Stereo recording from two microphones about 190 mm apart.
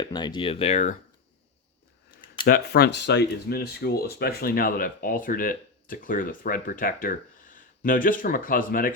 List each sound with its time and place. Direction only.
0.0 s speech: 25° left (ahead or behind)
2.5 s speech: 55° left (ahead or behind)